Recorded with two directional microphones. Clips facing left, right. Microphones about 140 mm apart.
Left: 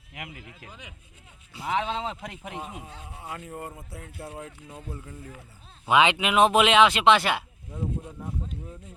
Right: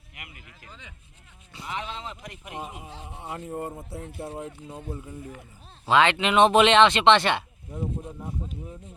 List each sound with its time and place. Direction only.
0.2 s speech: 75° left (ahead or behind)
0.7 s speech: 10° left (ahead or behind)
1.6 s speech: 90° left
3.0 s speech: 25° right (ahead or behind)
5.9 s speech: 15° left (ahead or behind)
7.7 s speech: 15° right (ahead or behind)